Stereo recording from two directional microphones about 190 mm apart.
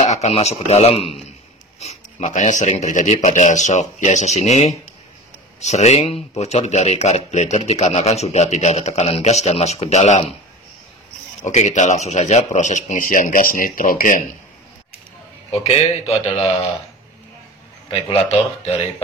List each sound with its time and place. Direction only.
0.0 s speech: 35° left (ahead or behind)
11.4 s speech: 40° left (ahead or behind)
15.5 s speech: 30° left (ahead or behind)
18.0 s speech: 30° left (ahead or behind)